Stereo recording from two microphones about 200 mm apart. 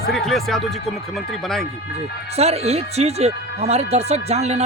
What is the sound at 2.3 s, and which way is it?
Speech, 30° right (ahead or behind).